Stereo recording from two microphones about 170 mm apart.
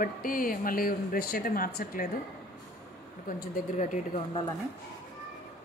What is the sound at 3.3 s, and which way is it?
Speech, 55° left (ahead or behind).